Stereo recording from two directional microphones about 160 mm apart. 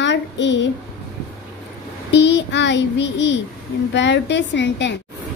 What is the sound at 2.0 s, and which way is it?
Child singing, 90° left.